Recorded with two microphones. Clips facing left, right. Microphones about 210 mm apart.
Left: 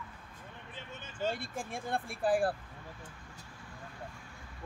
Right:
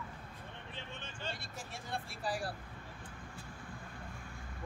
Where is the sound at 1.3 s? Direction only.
55° left (ahead or behind).